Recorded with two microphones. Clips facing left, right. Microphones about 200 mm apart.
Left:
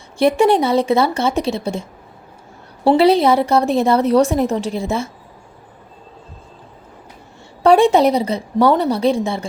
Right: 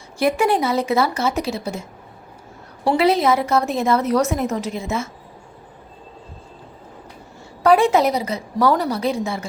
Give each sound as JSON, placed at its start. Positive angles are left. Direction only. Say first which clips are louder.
{"t": 0.2, "sound": "a woman's voice", "louder": "left 5 dB", "side_deg": 25}
{"t": 2.8, "sound": "a woman's voice", "louder": "left 5 dB", "side_deg": 30}
{"t": 7.6, "sound": "a woman's voice", "louder": "left 4 dB", "side_deg": 30}